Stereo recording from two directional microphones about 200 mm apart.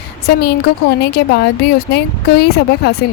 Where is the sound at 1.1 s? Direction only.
55° left (ahead or behind).